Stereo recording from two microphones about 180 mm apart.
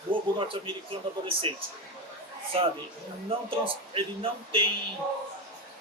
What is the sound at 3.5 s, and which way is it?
Speech, 30° right (ahead or behind).